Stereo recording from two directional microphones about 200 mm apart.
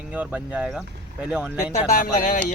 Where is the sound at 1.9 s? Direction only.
45° left (ahead or behind).